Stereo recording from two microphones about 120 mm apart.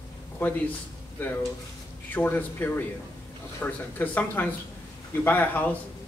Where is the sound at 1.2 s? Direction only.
15° left (ahead or behind).